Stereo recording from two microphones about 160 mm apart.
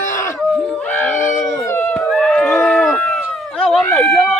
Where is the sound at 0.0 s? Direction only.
20° left (ahead or behind).